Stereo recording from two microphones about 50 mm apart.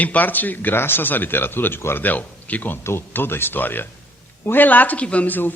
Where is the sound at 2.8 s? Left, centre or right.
Left.